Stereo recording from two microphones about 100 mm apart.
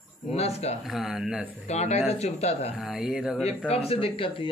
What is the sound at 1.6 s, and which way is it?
Speech, 90° left.